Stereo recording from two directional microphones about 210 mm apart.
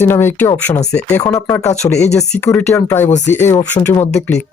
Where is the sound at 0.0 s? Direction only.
10° left (ahead or behind).